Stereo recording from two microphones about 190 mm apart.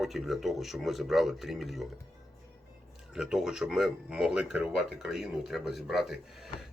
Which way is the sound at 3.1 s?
5° right (ahead or behind).